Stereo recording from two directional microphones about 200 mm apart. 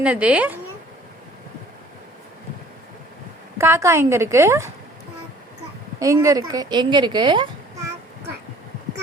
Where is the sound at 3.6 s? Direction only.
15° right (ahead or behind).